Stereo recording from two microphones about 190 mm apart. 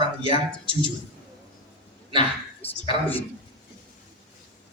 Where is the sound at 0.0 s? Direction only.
30° right (ahead or behind).